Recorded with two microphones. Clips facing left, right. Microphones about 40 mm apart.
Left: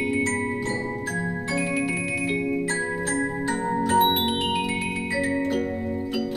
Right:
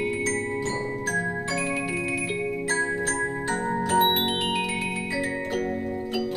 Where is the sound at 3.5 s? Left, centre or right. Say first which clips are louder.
Left 1 dB; centre.